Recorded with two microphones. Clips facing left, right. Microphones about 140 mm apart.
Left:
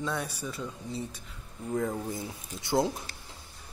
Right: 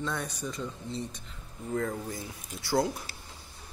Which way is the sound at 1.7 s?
20° left (ahead or behind).